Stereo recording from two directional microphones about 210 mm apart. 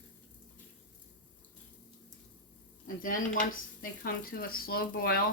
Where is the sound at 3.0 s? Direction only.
40° left (ahead or behind).